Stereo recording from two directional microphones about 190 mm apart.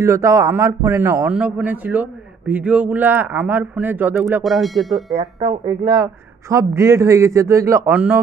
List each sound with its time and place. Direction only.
0.0 s a man's voice: 15° right (ahead or behind)
4.4 s speech: centre (ahead or behind)
5.1 s speech: 30° right (ahead or behind)
5.9 s a man's voice: 15° right (ahead or behind)